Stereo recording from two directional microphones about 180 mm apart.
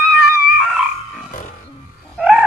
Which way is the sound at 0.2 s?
Centre (ahead or behind).